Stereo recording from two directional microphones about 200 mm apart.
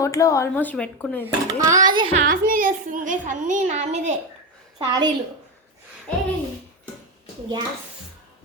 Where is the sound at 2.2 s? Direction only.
45° right (ahead or behind).